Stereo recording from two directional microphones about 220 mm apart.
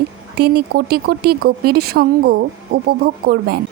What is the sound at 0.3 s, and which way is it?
A woman's voice, 45° right (ahead or behind).